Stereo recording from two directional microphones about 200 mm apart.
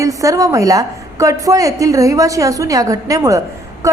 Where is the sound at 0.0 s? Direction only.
15° right (ahead or behind).